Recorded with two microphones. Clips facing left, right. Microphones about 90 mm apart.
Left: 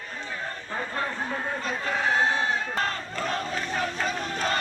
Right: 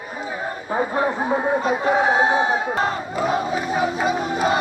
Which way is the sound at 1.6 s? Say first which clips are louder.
Right 7 dB; 15° right (ahead or behind).